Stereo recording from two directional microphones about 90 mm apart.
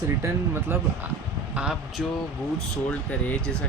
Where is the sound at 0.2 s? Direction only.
25° right (ahead or behind).